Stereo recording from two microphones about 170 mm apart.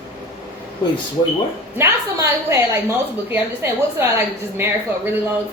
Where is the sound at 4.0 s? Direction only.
15° right (ahead or behind).